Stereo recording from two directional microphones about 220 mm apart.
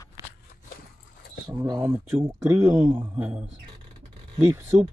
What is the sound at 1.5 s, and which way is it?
Speech, 15° right (ahead or behind).